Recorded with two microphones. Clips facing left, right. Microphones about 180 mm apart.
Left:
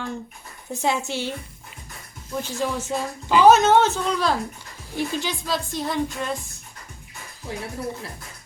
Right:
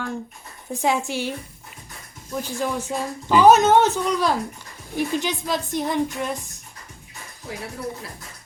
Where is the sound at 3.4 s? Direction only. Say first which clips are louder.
Even; 15° right (ahead or behind).